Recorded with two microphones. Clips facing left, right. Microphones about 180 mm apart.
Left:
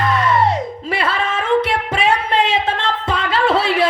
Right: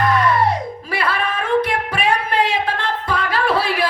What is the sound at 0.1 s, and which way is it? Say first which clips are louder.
Music: even; 25° left (ahead or behind).